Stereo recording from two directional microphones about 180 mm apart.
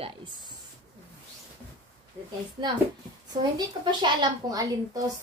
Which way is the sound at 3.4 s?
25° right (ahead or behind).